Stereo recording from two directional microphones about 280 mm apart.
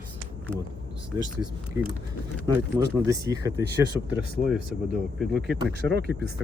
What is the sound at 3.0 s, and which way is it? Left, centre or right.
Speech, centre.